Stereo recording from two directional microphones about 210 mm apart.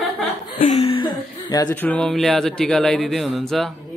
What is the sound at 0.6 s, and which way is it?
Speech, 30° left (ahead or behind).